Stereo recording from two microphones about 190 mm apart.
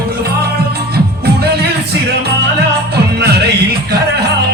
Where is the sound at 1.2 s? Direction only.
55° right (ahead or behind).